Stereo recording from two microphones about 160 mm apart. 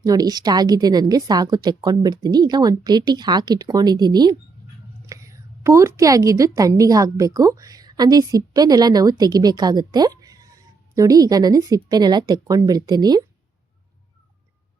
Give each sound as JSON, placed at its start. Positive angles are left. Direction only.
{"t": 0.0, "sound": "a woman's voice", "side_deg": -25}